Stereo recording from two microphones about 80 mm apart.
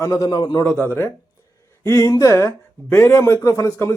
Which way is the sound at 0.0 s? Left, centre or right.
Left.